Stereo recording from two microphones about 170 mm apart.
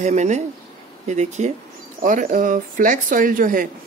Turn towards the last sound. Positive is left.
turn(degrees=-50)  # may be behind; listen again after turning